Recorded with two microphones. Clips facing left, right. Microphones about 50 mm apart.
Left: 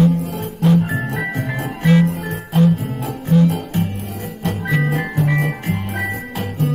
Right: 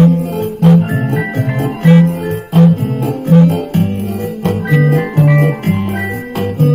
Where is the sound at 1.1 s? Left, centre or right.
Right.